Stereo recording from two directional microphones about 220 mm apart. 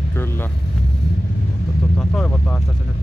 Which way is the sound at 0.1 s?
10° left (ahead or behind).